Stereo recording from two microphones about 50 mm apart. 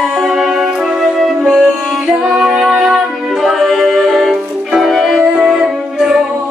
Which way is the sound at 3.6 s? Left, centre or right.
Centre.